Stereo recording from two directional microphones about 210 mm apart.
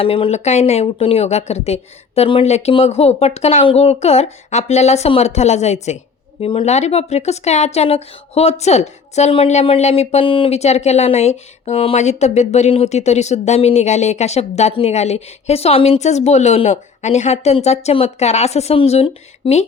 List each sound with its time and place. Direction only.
0.0 s a woman's voice: 25° left (ahead or behind)